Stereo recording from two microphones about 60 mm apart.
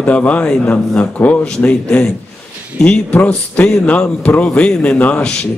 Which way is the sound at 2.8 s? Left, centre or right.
Left.